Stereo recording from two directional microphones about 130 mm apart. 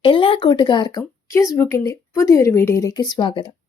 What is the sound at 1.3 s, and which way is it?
A woman's voice, 20° left (ahead or behind).